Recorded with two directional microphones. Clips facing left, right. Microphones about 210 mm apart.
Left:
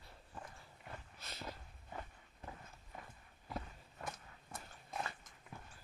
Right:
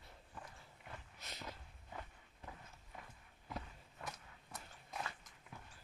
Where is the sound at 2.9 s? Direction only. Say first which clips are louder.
Left 2 dB; 45° left (ahead or behind).